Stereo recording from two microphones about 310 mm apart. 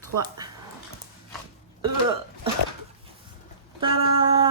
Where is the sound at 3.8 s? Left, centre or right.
Centre.